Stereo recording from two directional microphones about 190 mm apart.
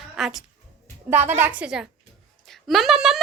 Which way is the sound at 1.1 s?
10° right (ahead or behind).